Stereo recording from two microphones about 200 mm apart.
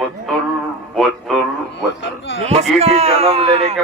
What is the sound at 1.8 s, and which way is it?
Speech, 70° left (ahead or behind).